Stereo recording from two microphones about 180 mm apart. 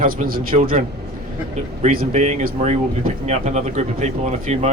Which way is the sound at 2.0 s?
40° right (ahead or behind).